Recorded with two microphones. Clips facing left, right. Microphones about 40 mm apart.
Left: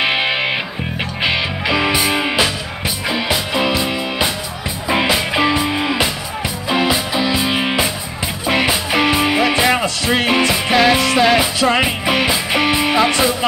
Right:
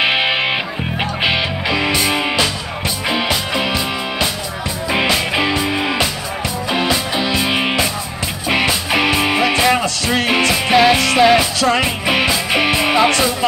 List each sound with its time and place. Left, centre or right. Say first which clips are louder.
0.0 s music: right 1 dB; centre
1.8 s music: left 1 dB; centre
7.2 s music: even; centre
8.9 s music: left 1 dB; centre
10.3 s music: right 3 dB; centre
11.6 s music: left 1 dB; centre
12.5 s music: even; centre
13.1 s music: even; centre